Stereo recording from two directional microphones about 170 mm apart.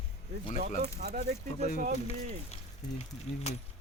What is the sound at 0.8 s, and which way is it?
Speech, 40° right (ahead or behind).